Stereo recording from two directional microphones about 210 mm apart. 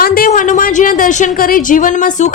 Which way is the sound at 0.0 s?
45° left (ahead or behind).